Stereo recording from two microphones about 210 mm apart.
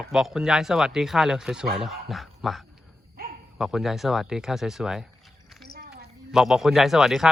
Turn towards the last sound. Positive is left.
turn(degrees=0)  # may be behind; listen again after turning